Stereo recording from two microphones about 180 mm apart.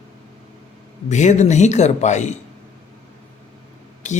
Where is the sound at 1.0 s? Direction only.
40° left (ahead or behind).